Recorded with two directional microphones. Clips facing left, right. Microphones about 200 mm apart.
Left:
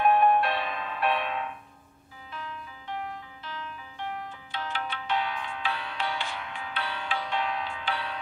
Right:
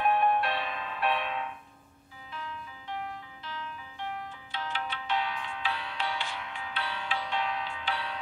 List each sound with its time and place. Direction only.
0.0 s music: 55° left (ahead or behind)
4.5 s music: 55° left (ahead or behind)